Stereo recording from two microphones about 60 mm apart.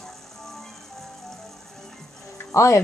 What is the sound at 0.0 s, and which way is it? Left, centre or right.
Music, centre.